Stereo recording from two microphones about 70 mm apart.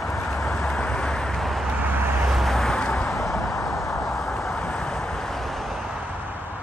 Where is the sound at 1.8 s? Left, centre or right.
Right.